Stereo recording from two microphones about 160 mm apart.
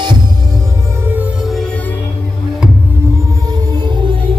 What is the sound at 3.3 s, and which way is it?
Music, 25° right (ahead or behind).